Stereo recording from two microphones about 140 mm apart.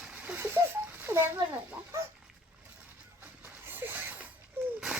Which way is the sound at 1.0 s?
20° right (ahead or behind).